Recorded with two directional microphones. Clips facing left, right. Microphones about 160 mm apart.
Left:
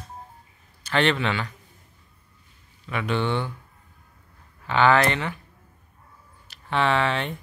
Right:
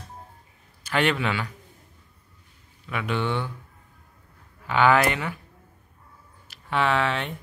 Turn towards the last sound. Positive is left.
turn(degrees=0)  # may be behind; listen again after turning